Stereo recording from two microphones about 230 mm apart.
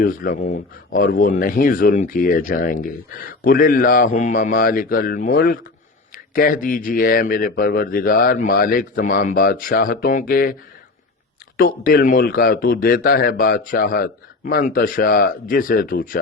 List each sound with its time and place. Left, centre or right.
0.0 s speech: left
11.5 s speech: left